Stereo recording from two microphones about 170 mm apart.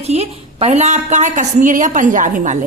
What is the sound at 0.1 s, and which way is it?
A woman's voice, 40° right (ahead or behind).